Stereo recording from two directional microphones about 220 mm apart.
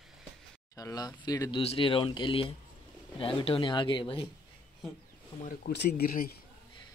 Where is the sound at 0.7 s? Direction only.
15° left (ahead or behind).